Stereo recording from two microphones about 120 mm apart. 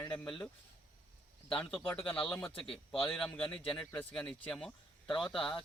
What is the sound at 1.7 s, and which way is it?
Speech, 15° left (ahead or behind).